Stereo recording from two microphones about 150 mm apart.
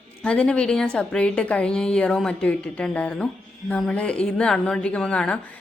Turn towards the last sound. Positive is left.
turn(degrees=5)  # may be behind; listen again after turning